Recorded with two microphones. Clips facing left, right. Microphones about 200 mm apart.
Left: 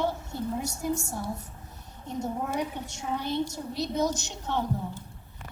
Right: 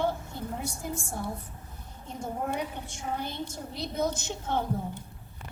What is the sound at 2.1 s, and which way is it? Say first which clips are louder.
A woman's voice: left 2 dB; 55° right (ahead or behind).